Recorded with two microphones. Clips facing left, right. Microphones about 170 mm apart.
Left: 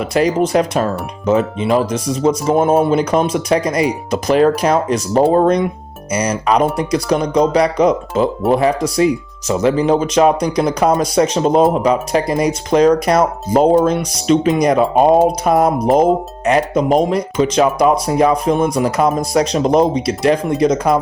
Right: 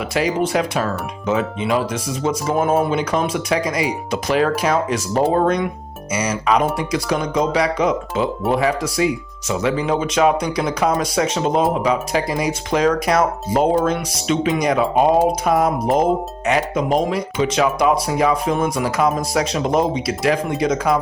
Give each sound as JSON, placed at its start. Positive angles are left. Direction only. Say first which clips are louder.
{"t": 0.0, "sound": "speech", "louder": "left 5 dB", "side_deg": 40}